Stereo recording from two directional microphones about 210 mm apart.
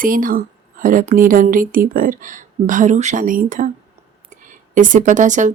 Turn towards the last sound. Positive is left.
turn(degrees=-35)  # may be behind; listen again after turning